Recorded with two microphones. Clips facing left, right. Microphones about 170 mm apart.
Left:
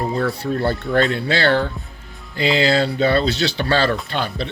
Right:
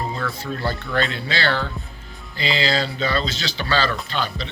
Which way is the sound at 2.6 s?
60° left (ahead or behind).